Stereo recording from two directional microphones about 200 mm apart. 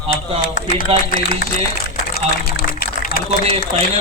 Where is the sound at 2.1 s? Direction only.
50° left (ahead or behind).